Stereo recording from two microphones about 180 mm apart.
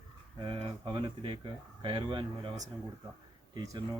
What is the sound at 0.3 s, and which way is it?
Speech, 30° right (ahead or behind).